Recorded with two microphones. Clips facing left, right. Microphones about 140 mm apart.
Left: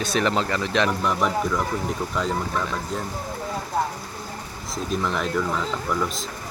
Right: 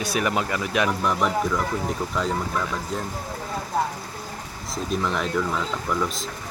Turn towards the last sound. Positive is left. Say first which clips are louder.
# even
turn(degrees=0)  # may be behind; listen again after turning